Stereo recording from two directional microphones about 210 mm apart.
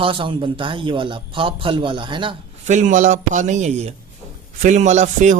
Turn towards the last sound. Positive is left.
turn(degrees=-35)  # may be behind; listen again after turning